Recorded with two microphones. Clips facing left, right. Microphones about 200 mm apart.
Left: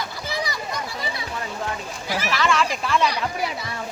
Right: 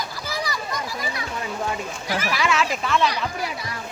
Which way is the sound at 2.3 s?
5° right (ahead or behind).